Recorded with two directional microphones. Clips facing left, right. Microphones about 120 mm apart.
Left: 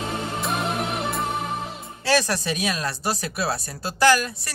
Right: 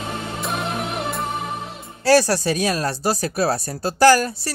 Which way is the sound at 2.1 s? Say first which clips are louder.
Right 6 dB; 35° right (ahead or behind).